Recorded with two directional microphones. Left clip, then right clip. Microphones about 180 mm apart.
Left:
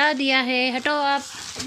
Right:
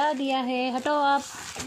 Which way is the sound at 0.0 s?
10° left (ahead or behind).